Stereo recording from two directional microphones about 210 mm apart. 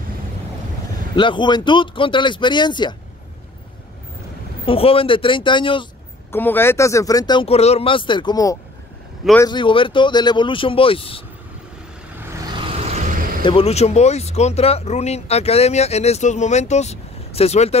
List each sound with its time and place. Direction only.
1.1 s speech: 20° left (ahead or behind)
4.6 s speech: 25° left (ahead or behind)
6.3 s speech: 10° left (ahead or behind); by 11.2 s 25° left (ahead or behind)
12.7 s vehicle: 30° right (ahead or behind)
13.4 s speech: 25° left (ahead or behind)